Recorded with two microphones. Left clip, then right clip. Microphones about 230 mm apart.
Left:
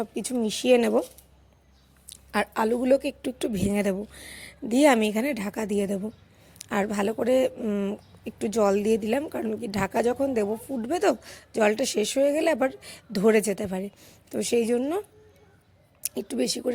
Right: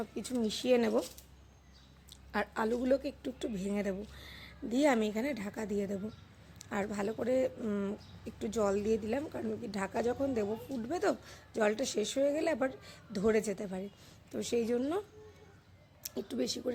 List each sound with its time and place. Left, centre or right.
0.0 s speech: left
2.0 s speech: left
16.0 s speech: left